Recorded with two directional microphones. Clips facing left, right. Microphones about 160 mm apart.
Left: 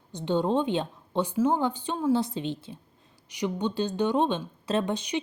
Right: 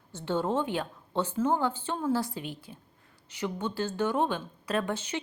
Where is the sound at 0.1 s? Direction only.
15° left (ahead or behind).